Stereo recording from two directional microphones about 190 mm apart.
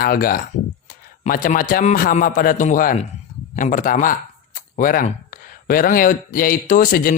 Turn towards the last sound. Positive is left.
turn(degrees=50)  # may be behind; listen again after turning